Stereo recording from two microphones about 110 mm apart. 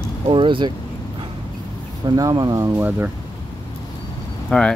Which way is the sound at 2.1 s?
35° right (ahead or behind).